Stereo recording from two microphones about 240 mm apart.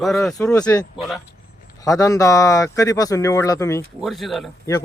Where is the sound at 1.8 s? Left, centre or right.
Centre.